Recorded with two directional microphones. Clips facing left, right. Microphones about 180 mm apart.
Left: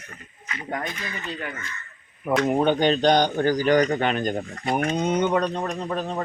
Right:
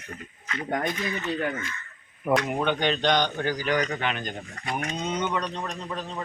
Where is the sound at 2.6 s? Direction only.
40° left (ahead or behind).